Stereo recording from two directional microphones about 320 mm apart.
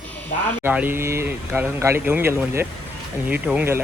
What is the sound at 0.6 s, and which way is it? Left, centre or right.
Speech, centre.